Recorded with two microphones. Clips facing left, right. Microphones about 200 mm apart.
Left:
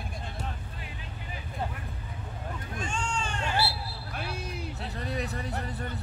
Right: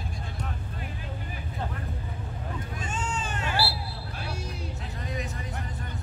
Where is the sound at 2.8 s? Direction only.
5° right (ahead or behind).